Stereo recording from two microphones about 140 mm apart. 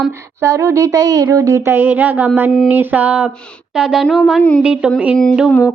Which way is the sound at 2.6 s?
15° right (ahead or behind).